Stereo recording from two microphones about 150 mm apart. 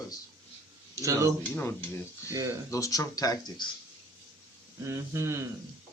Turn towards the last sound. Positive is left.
turn(degrees=-20)  # may be behind; listen again after turning